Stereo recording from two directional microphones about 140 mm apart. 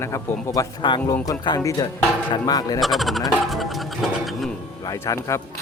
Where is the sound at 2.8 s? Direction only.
Centre (ahead or behind).